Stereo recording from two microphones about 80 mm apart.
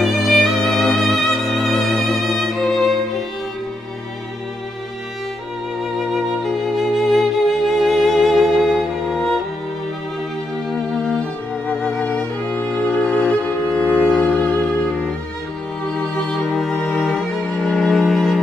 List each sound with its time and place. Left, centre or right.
0.0 s music: centre
5.9 s music: centre
10.7 s music: centre